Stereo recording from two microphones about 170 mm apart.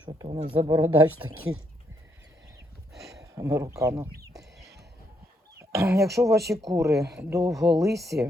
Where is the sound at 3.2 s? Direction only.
20° right (ahead or behind).